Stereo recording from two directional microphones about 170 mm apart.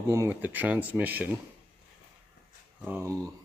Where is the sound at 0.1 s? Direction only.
15° right (ahead or behind).